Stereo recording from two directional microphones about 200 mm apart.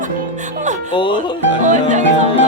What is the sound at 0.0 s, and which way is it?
Music, 40° right (ahead or behind).